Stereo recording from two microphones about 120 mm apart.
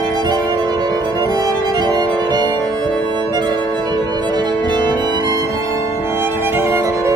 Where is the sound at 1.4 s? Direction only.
35° right (ahead or behind).